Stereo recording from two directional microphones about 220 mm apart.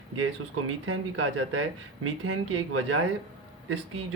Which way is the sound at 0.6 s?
70° right (ahead or behind).